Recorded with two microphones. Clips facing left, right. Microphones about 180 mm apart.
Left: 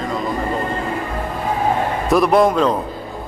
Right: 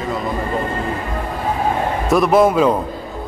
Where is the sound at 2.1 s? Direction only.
Centre (ahead or behind).